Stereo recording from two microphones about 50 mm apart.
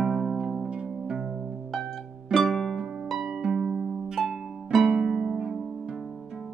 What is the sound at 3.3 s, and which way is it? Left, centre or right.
Music, centre.